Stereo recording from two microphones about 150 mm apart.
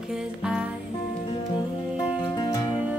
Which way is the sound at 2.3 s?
25° left (ahead or behind).